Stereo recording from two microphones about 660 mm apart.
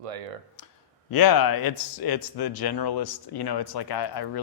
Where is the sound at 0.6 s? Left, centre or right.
Left.